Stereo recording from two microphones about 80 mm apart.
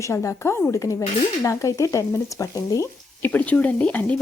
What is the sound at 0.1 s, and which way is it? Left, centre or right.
Speech, left.